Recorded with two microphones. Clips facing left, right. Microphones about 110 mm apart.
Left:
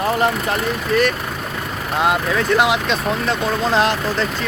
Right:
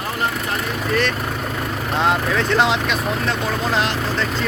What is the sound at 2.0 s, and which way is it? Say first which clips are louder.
Speech: left 1 dB; 10° left (ahead or behind).